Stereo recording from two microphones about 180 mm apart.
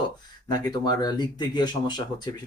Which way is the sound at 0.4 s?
20° left (ahead or behind).